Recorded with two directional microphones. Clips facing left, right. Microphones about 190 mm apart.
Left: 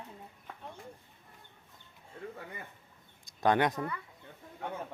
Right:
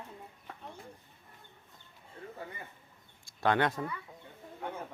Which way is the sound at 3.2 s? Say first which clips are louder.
Left 1 dB; 20° left (ahead or behind).